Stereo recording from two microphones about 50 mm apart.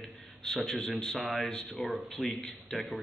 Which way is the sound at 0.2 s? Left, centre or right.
Centre.